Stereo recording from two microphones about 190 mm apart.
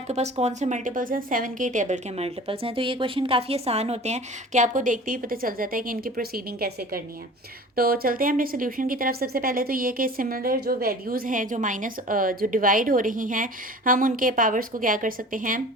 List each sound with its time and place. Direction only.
0.1 s a woman's voice: 35° right (ahead or behind)